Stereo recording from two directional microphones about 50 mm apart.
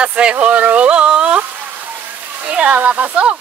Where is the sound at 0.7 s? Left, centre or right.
Right.